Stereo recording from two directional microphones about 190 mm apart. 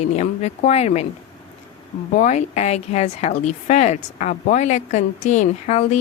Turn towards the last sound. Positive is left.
turn(degrees=40)  # may be behind; listen again after turning